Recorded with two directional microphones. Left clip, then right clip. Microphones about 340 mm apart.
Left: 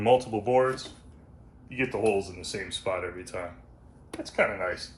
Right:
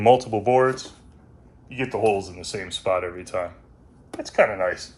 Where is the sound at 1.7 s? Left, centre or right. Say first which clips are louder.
Right 4 dB; right.